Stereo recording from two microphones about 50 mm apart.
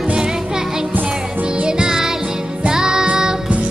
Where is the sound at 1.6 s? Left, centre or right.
Centre.